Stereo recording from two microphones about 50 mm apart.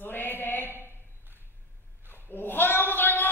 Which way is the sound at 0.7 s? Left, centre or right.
Right.